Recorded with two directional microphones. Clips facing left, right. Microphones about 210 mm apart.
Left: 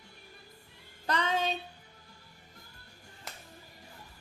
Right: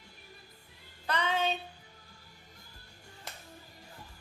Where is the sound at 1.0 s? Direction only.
40° left (ahead or behind).